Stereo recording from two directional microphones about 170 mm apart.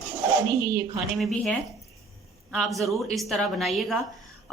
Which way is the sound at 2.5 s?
Centre (ahead or behind).